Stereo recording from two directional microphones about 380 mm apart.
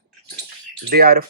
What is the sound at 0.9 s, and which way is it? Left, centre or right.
Speech, right.